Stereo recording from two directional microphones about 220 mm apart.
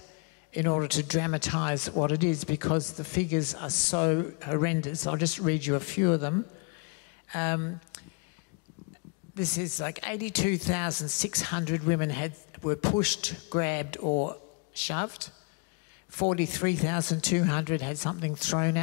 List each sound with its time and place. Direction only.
0.6 s speech: 10° left (ahead or behind)
9.4 s speech: 5° left (ahead or behind)
14.0 s speech: 25° left (ahead or behind)
14.8 s speech: 5° left (ahead or behind)
16.2 s speech: 10° left (ahead or behind)